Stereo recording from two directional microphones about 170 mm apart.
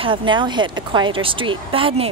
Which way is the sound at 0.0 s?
30° right (ahead or behind).